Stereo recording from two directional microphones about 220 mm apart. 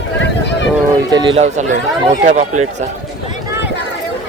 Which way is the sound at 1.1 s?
20° right (ahead or behind).